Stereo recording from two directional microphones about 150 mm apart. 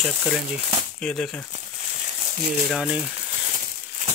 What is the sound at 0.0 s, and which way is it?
Speech, centre (ahead or behind).